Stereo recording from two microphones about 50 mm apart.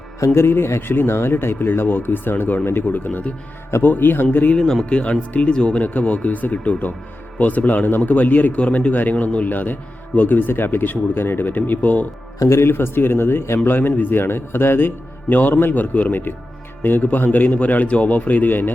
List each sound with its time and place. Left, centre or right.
0.3 s a man's voice: left
4.5 s speech: centre
4.9 s speech: left
5.8 s a man's voice: left
12.5 s a man's voice: left
12.7 s a man's voice: left
13.7 s a man's voice: left